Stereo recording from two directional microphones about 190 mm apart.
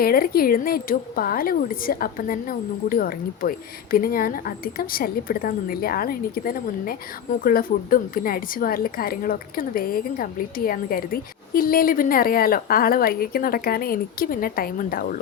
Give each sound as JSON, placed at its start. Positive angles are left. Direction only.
{"t": 0.0, "sound": "a woman's voice", "side_deg": 50}